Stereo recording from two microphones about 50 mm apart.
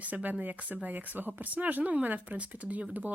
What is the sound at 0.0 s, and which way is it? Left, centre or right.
Speech, right.